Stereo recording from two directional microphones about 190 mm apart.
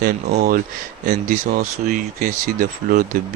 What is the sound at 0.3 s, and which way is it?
Speech, 40° right (ahead or behind).